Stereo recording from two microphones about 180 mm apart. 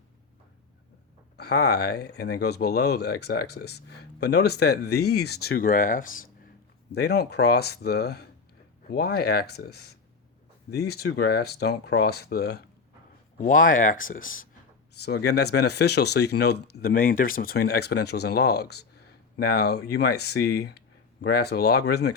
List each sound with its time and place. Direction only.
1.4 s speech: 65° left (ahead or behind); by 6.2 s 50° left (ahead or behind)
6.9 s speech: 65° left (ahead or behind)
13.4 s speech: 50° left (ahead or behind)
15.0 s speech: 65° left (ahead or behind)